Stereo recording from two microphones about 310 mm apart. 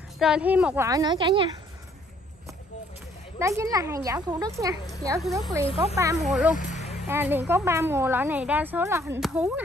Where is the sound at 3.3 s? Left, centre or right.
Centre.